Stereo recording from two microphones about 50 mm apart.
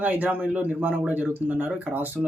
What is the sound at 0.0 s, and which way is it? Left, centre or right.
Speech, right.